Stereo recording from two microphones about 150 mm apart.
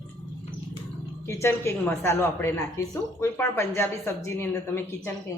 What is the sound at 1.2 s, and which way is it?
Speech, 15° left (ahead or behind).